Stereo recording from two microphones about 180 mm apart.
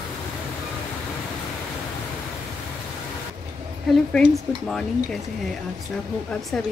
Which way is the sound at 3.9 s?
5° left (ahead or behind).